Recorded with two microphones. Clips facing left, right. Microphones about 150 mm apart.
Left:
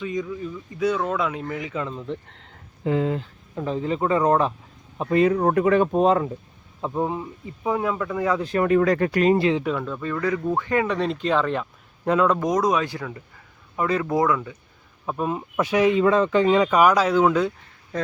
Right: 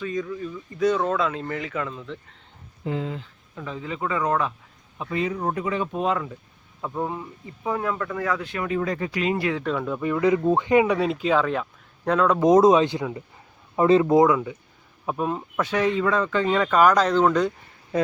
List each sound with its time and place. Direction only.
0.0 s speech: 20° left (ahead or behind)
2.4 s a sound: 80° left; by 3.2 s 60° left (ahead or behind)
3.5 s speech: 35° left (ahead or behind)
4.9 s speech: 50° left (ahead or behind)
5.9 s speech: 35° left (ahead or behind)
6.8 s speech: 20° left (ahead or behind)
8.4 s speech: 40° left (ahead or behind)
8.7 s speech: 70° left (ahead or behind)
9.4 s speech: 20° left (ahead or behind)
9.8 s speech: 15° right (ahead or behind); by 12.4 s 5° left (ahead or behind)
12.4 s speech: 25° right (ahead or behind)
15.0 s speech: centre (ahead or behind)